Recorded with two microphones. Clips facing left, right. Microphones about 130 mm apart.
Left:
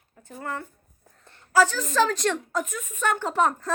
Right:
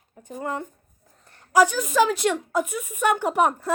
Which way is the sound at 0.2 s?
15° right (ahead or behind).